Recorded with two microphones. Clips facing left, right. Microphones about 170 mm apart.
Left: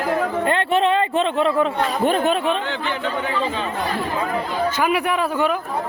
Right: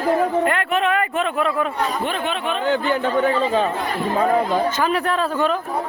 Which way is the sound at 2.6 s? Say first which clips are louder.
Right 5 dB; 45° right (ahead or behind).